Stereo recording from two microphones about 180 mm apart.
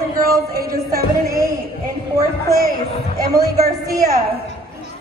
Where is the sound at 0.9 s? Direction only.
20° right (ahead or behind).